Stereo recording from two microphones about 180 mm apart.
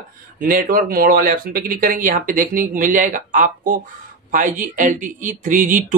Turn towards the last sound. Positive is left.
turn(degrees=-45)  # may be behind; listen again after turning